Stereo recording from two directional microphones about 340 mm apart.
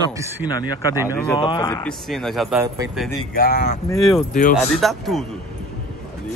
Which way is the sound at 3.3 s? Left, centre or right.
Left.